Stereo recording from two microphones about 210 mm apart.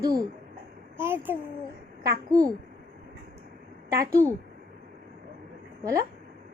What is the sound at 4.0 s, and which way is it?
Speech, 15° right (ahead or behind).